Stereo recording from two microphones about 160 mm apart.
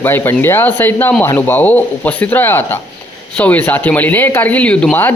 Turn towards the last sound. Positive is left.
turn(degrees=10)  # may be behind; listen again after turning